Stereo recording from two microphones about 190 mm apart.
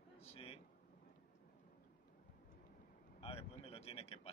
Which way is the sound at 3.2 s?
30° left (ahead or behind).